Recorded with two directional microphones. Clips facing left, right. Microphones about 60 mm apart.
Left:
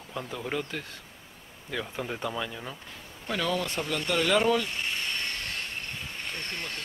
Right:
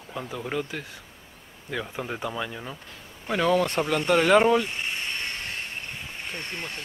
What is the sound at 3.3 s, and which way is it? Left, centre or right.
Speech, right.